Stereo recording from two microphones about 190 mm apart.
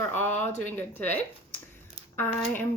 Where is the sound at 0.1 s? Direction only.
10° left (ahead or behind).